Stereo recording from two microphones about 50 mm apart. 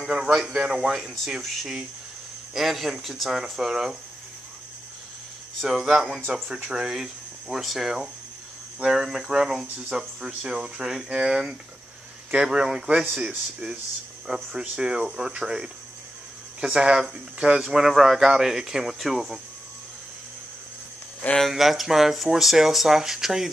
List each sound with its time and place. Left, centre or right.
0.0 s speech: centre
5.6 s speech: centre
14.2 s speech: centre
21.4 s speech: centre